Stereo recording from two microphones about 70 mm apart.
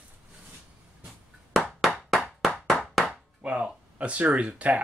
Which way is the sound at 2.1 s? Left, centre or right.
Centre.